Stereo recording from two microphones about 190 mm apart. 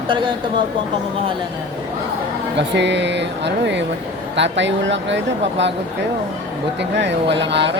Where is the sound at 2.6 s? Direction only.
65° right (ahead or behind).